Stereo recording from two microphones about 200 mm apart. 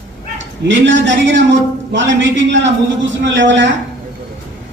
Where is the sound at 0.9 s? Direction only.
65° right (ahead or behind).